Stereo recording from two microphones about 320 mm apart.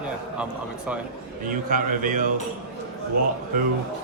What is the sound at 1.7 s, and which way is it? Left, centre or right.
Speech, right.